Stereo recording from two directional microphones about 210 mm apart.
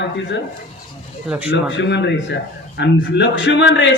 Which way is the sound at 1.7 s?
55° left (ahead or behind).